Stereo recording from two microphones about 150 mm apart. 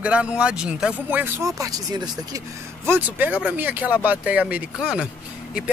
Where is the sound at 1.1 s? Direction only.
15° right (ahead or behind).